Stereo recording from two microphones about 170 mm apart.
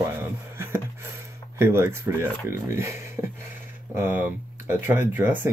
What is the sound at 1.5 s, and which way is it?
Speech, 15° right (ahead or behind).